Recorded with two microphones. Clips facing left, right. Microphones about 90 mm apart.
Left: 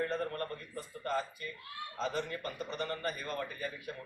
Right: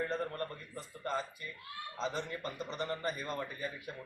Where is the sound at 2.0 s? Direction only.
25° right (ahead or behind).